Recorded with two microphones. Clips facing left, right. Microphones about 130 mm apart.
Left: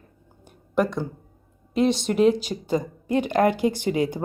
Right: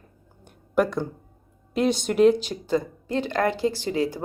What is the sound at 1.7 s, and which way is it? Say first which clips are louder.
Speech: left 1 dB; centre (ahead or behind).